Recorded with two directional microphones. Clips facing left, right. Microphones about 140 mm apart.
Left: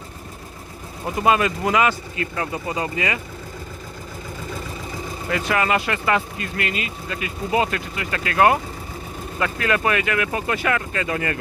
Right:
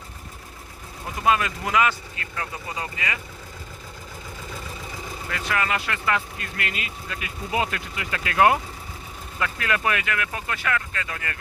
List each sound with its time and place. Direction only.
1.3 s speech: 5° left (ahead or behind)
2.3 s speech: 20° left (ahead or behind)
5.3 s speech: 10° left (ahead or behind)
6.6 s speech: centre (ahead or behind); by 11.3 s 25° left (ahead or behind)